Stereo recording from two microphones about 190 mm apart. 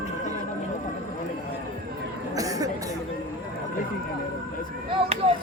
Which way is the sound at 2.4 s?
20° right (ahead or behind).